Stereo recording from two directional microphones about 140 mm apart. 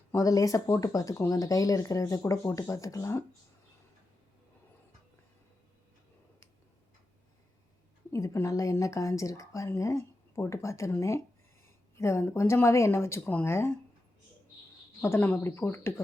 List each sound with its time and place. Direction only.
0.1 s speech: 25° left (ahead or behind)
8.1 s speech: 20° left (ahead or behind)
15.0 s speech: 15° left (ahead or behind)